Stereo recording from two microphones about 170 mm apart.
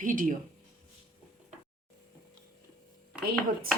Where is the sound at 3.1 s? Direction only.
5° right (ahead or behind).